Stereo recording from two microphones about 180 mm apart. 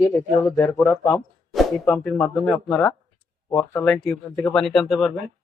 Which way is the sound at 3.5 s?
15° left (ahead or behind).